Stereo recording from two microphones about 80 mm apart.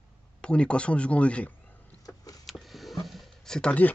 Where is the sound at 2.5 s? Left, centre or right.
Centre.